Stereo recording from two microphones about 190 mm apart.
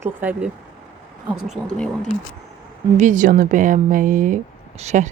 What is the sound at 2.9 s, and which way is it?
A woman's voice, 40° right (ahead or behind).